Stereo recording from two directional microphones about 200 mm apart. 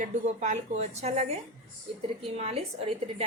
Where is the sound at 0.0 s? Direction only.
35° right (ahead or behind).